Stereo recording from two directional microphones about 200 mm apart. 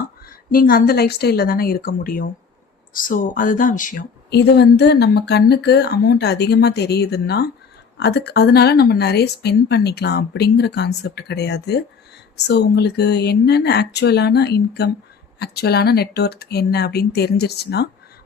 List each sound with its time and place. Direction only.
0.3 s a woman's voice: 45° left (ahead or behind)